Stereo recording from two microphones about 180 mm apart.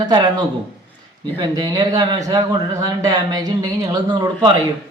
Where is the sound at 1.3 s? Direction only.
25° right (ahead or behind).